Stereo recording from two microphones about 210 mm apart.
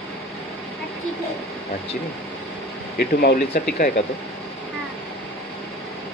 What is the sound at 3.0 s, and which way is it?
Speech, 45° left (ahead or behind).